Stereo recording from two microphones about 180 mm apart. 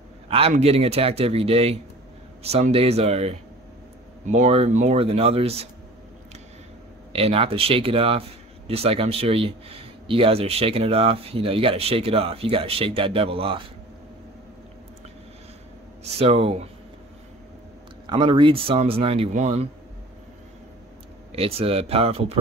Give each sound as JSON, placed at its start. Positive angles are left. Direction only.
{"t": 0.3, "sound": "speech", "side_deg": -35}
{"t": 7.1, "sound": "speech", "side_deg": -35}
{"t": 16.0, "sound": "speech", "side_deg": -35}
{"t": 18.0, "sound": "speech", "side_deg": -25}
{"t": 21.3, "sound": "speech", "side_deg": -35}